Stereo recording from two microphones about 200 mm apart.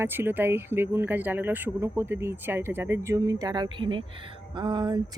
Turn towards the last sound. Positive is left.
turn(degrees=-25)  # may be behind; listen again after turning